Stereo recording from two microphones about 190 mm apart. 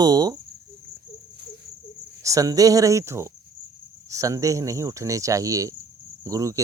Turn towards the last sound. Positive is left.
turn(degrees=-15)  # may be behind; listen again after turning